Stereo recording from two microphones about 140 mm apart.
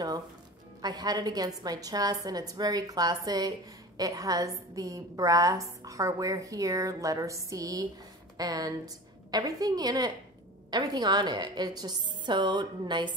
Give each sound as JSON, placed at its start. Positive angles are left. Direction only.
{"t": 0.8, "sound": "a woman's voice", "side_deg": -30}